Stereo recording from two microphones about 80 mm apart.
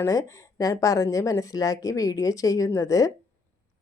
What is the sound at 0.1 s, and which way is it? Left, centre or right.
Speech, left.